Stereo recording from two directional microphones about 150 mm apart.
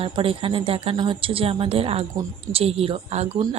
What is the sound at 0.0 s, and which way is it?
A woman's voice, 35° right (ahead or behind).